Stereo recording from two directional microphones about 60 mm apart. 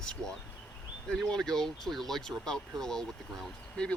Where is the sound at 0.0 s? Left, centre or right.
Centre.